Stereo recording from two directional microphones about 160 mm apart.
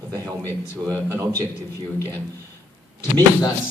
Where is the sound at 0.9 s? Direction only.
20° right (ahead or behind).